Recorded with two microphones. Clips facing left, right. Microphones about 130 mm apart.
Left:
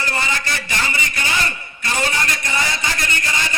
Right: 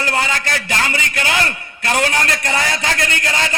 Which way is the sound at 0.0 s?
65° right (ahead or behind).